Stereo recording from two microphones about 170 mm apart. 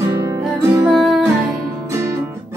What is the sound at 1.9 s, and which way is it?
Music, 15° right (ahead or behind).